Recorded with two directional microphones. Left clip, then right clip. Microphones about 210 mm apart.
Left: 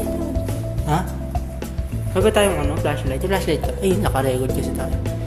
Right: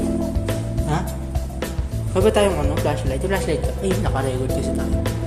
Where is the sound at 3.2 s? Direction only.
15° left (ahead or behind).